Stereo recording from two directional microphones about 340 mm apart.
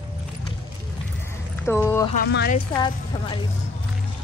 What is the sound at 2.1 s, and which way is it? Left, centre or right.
Speech, left.